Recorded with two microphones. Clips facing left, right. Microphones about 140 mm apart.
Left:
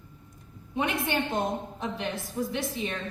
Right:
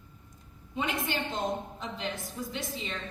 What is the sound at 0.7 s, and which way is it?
A woman's voice, 60° left (ahead or behind).